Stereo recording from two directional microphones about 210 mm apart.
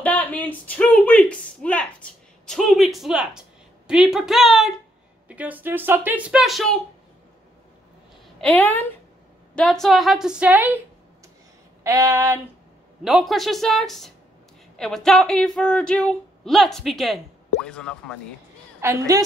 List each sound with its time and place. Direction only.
0.0 s a sound: 5° left (ahead or behind)
3.8 s speech: 5° right (ahead or behind)
8.4 s speech: 5° left (ahead or behind)
11.8 s speech: 15° right (ahead or behind)
13.0 s speech: centre (ahead or behind)
18.8 s speech: 15° right (ahead or behind)